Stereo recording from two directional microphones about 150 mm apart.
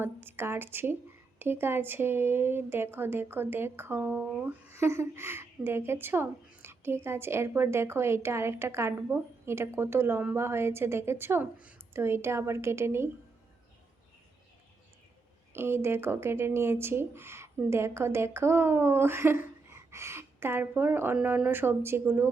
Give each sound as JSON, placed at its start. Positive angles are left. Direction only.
{"t": 0.0, "sound": "speech", "side_deg": -15}
{"t": 15.5, "sound": "speech", "side_deg": -15}